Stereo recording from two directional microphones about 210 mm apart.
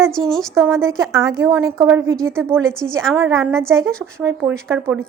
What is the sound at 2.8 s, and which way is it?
Speech, 60° right (ahead or behind).